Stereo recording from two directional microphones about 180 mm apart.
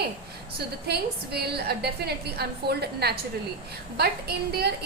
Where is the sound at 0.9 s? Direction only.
65° right (ahead or behind).